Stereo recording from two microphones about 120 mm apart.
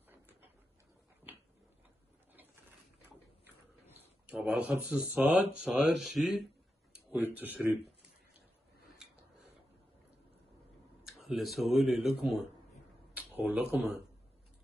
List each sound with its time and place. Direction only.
0.1 s a sound: 15° right (ahead or behind)
3.8 s speech: 15° right (ahead or behind)
6.9 s a sound: 15° right (ahead or behind)
7.3 s speech: 15° right (ahead or behind)
11.1 s speech: centre (ahead or behind)
13.1 s speech: 15° right (ahead or behind)